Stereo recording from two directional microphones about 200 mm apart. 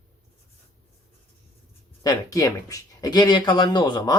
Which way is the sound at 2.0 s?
15° left (ahead or behind).